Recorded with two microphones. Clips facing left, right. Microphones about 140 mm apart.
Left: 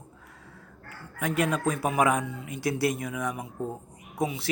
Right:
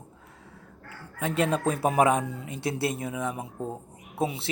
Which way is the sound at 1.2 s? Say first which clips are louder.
Right 1 dB; 30° right (ahead or behind).